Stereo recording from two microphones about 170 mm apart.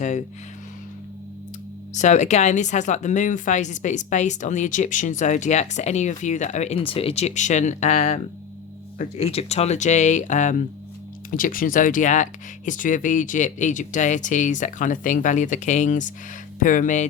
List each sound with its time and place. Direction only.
0.0 s speech: 45° left (ahead or behind)
1.9 s speech: 45° left (ahead or behind)